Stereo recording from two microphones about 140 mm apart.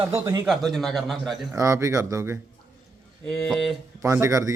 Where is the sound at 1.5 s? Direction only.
25° right (ahead or behind).